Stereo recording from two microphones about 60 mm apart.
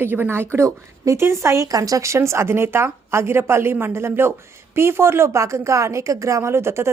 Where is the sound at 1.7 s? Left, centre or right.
Right.